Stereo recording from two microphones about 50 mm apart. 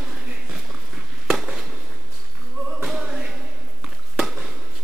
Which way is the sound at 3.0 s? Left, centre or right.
Right.